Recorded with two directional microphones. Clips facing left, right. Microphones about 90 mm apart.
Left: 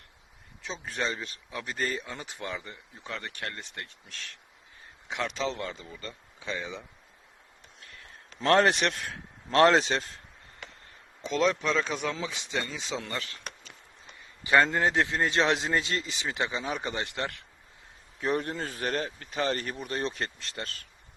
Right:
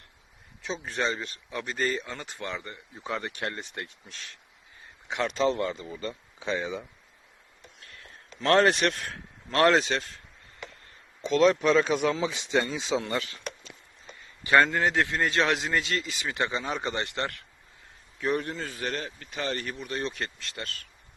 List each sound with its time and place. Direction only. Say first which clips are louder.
0.6 s speech: right 3 dB; centre (ahead or behind)
3.0 s speech: right 5 dB; 15° right (ahead or behind)
5.0 s speech: right 5 dB; centre (ahead or behind)
6.4 s speech: right 5 dB; 25° right (ahead or behind)
8.4 s a man's voice: right 1 dB; 15° left (ahead or behind)
11.2 s speech: right 5 dB; centre (ahead or behind)
12.2 s speech: right 6 dB; 30° right (ahead or behind)
12.6 s speech: right 6 dB; 15° right (ahead or behind)
14.4 s a man's voice: right 1 dB; 20° left (ahead or behind)
18.2 s speech: even; 30° left (ahead or behind)